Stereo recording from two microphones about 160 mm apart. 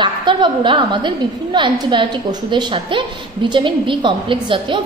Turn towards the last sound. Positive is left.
turn(degrees=-30)  # may be behind; listen again after turning